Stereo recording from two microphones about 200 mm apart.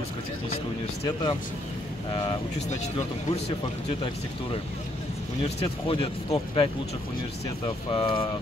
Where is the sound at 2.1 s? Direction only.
25° left (ahead or behind).